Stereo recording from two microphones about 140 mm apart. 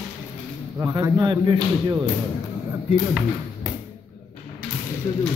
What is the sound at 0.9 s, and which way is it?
Speech, 30° right (ahead or behind).